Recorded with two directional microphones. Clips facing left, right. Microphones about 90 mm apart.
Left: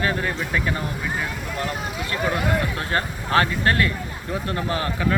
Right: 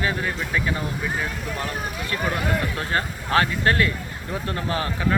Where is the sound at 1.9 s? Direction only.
25° left (ahead or behind).